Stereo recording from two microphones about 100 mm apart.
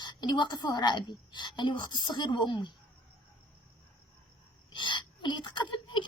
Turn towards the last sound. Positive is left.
turn(degrees=50)  # may be behind; listen again after turning